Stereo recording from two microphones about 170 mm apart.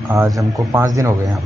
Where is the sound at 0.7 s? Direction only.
15° right (ahead or behind).